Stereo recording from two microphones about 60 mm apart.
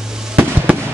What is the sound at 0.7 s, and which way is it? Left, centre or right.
Fireworks, right.